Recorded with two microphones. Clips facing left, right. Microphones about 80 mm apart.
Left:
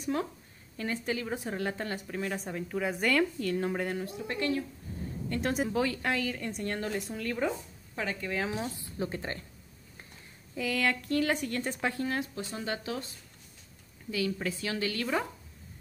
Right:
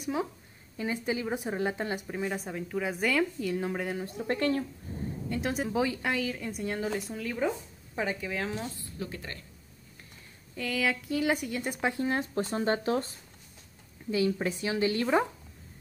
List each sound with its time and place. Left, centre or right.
0.0 s a woman's voice: centre
4.0 s speech: right
4.9 s a sound: right
5.3 s a woman's voice: centre
5.7 s a woman's voice: centre
6.0 s a woman's voice: centre
7.9 s speech: centre
8.2 s a woman's voice: centre
8.7 s speech: left
10.5 s a woman's voice: centre; by 12.2 s right
12.2 s speech: right
14.1 s a woman's voice: right